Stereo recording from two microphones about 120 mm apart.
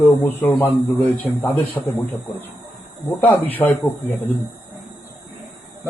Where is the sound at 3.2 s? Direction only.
15° left (ahead or behind).